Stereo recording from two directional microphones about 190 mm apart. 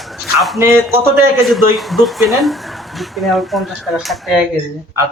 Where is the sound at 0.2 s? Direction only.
Centre (ahead or behind).